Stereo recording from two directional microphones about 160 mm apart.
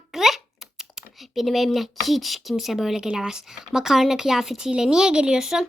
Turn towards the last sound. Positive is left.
turn(degrees=-5)  # may be behind; listen again after turning